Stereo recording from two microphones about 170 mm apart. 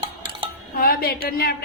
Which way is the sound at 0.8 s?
65° left (ahead or behind).